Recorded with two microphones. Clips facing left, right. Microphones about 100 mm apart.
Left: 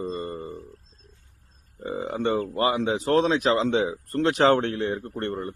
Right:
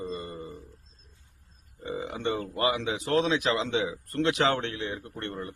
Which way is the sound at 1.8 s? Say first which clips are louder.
Left 5 dB; 40° left (ahead or behind).